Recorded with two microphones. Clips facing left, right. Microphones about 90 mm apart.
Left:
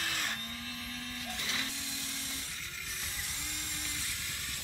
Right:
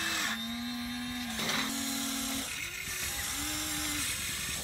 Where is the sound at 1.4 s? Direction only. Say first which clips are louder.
Right 8 dB; 65° right (ahead or behind).